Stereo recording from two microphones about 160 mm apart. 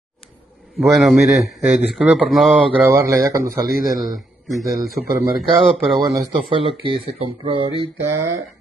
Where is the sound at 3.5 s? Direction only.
65° right (ahead or behind).